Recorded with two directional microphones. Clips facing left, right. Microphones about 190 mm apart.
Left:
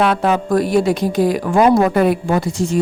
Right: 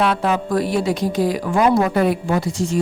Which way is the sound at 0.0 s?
50° left (ahead or behind).